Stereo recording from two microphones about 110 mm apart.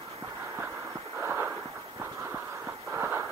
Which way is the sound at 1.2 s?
20° right (ahead or behind).